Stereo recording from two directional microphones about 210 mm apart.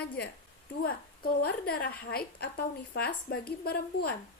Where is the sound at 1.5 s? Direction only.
45° left (ahead or behind).